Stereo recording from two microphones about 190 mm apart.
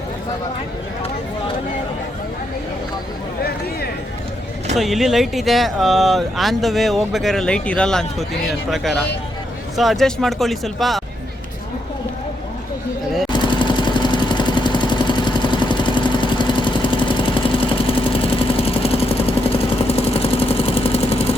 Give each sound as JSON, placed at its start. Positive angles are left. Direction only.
{"t": 4.8, "sound": "speech", "side_deg": 0}
{"t": 13.3, "sound": "vehicle", "side_deg": 25}